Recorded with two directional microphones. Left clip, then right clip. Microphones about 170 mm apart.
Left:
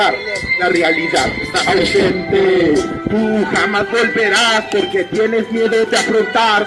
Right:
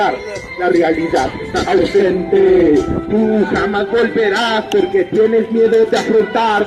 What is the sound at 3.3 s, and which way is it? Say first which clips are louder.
Speech: even; 15° left (ahead or behind).